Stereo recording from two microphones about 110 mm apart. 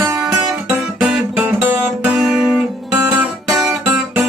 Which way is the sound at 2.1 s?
5° right (ahead or behind).